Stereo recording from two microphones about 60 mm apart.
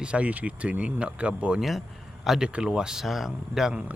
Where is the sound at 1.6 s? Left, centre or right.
Centre.